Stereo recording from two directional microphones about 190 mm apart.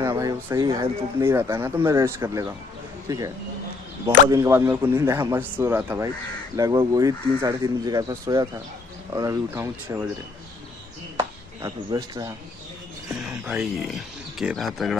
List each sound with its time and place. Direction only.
0.0 s a man's voice: 15° right (ahead or behind)
11.1 s chop: 20° right (ahead or behind)
13.1 s speech: 5° right (ahead or behind)